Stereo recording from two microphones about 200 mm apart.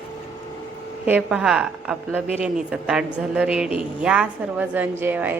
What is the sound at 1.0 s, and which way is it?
A woman's voice, 5° right (ahead or behind).